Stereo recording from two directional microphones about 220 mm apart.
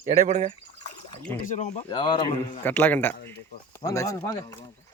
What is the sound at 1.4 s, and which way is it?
Speech, 30° left (ahead or behind).